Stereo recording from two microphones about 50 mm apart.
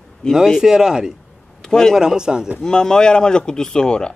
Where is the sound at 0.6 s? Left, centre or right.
Centre.